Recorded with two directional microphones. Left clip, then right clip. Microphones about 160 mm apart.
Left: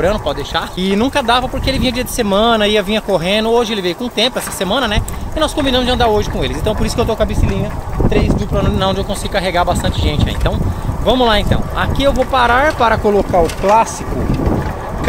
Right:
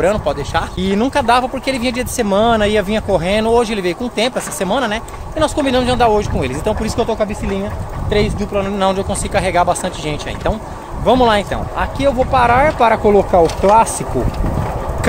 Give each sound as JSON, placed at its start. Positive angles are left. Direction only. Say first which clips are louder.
{"t": 0.0, "sound": "speech", "louder": "even", "side_deg": -5}
{"t": 0.7, "sound": "speech", "louder": "left 2 dB", "side_deg": 10}
{"t": 1.2, "sound": "speech", "louder": "even", "side_deg": -5}
{"t": 8.1, "sound": "speech", "louder": "right 1 dB", "side_deg": -25}
{"t": 8.5, "sound": "speech", "louder": "right 2 dB", "side_deg": -10}
{"t": 13.3, "sound": "speech", "louder": "right 1 dB", "side_deg": -60}